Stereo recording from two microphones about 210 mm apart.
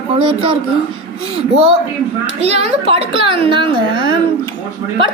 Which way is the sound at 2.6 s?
25° right (ahead or behind).